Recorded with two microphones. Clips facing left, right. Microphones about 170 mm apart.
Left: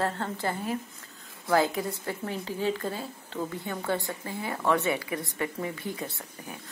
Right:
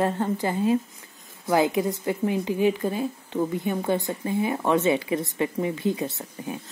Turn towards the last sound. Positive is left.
turn(degrees=-20)  # may be behind; listen again after turning